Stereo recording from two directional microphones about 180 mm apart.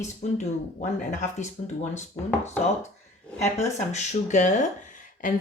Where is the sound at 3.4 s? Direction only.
40° left (ahead or behind).